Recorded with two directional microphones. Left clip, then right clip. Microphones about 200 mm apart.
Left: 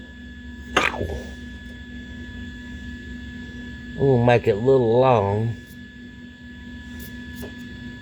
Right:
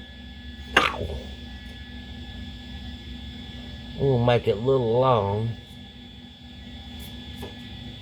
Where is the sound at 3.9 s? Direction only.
30° left (ahead or behind).